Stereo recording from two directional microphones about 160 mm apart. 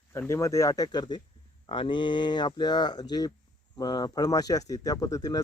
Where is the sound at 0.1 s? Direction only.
15° left (ahead or behind).